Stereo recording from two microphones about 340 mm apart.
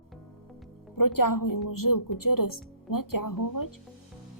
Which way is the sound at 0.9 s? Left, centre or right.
Left.